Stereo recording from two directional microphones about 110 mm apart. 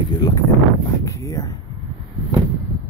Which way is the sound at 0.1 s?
35° left (ahead or behind).